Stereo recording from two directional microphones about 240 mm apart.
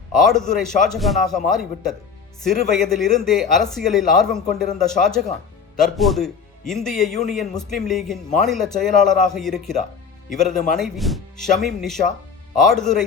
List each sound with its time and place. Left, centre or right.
0.2 s speech: centre